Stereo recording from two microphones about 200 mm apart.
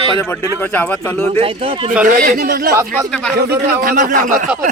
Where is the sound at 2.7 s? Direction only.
15° right (ahead or behind).